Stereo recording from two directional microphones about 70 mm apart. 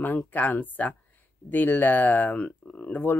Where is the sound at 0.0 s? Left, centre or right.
Left.